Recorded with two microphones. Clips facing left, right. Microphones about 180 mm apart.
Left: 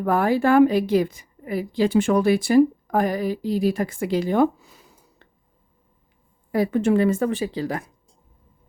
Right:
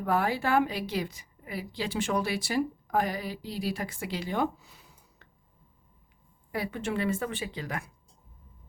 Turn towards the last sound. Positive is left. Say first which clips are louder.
# left 10 dB
turn(degrees=35)  # may be behind; listen again after turning